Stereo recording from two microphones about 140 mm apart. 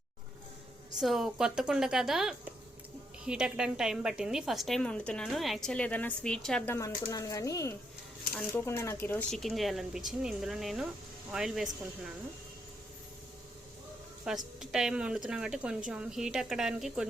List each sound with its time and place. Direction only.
0.9 s a woman's voice: centre (ahead or behind)
6.7 s speech: 25° left (ahead or behind)
9.3 s a woman's voice: centre (ahead or behind)
14.3 s a woman's voice: centre (ahead or behind)